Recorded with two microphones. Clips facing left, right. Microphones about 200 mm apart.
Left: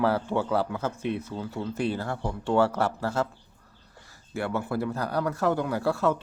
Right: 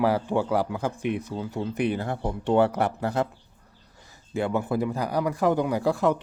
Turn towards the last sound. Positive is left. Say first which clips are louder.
# right 2 dB
turn(degrees=-15)  # may be behind; listen again after turning